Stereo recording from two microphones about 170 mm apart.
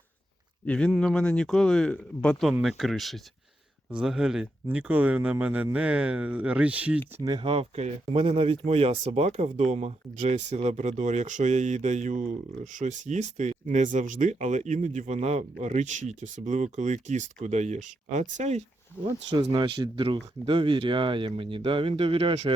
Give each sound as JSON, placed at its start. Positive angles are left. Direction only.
{"t": 0.6, "sound": "speech", "side_deg": 5}
{"t": 7.2, "sound": "speech", "side_deg": -25}
{"t": 19.0, "sound": "speech", "side_deg": -30}